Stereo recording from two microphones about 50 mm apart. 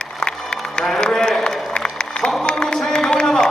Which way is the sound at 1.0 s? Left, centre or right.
Centre.